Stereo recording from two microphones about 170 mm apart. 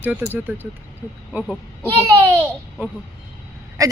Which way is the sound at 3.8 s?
20° right (ahead or behind).